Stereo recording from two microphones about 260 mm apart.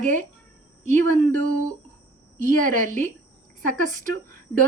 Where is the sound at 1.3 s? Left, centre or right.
Right.